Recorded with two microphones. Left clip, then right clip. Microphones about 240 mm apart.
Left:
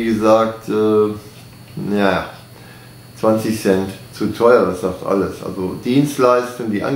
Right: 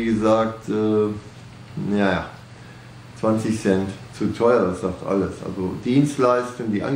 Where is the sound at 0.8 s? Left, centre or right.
Centre.